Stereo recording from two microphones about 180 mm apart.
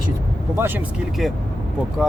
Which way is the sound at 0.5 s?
10° right (ahead or behind).